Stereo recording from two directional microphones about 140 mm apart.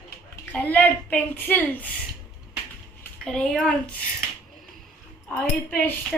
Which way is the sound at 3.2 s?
5° left (ahead or behind).